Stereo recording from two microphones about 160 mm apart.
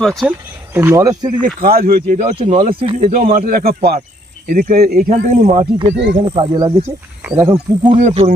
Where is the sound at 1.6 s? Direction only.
70° right (ahead or behind).